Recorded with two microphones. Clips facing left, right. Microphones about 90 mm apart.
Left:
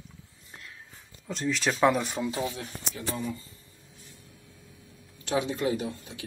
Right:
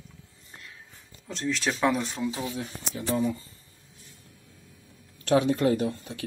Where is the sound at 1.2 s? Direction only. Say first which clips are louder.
Even; centre (ahead or behind).